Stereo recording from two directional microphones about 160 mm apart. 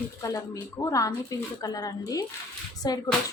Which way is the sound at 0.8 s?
15° left (ahead or behind).